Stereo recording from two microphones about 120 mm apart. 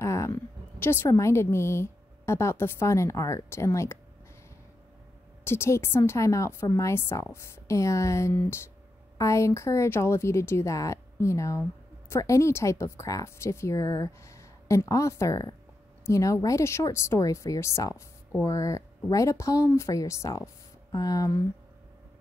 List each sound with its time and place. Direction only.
0.0 s a woman's voice: 25° left (ahead or behind)
5.4 s speech: 20° left (ahead or behind)